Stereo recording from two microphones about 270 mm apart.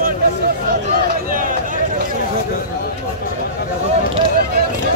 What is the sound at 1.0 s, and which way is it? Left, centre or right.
Speech, right.